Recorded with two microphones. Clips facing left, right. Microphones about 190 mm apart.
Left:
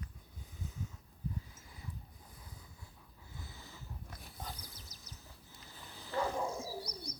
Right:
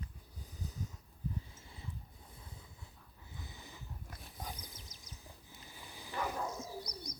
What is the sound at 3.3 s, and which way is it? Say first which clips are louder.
Wild animals: right 1 dB; 20° right (ahead or behind).